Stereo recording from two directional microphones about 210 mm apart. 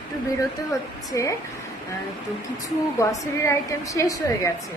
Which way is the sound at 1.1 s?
15° left (ahead or behind).